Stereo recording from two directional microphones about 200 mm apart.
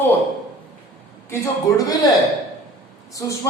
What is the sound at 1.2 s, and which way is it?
Speech, 15° left (ahead or behind).